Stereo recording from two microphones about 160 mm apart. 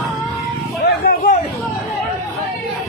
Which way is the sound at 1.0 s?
55° left (ahead or behind).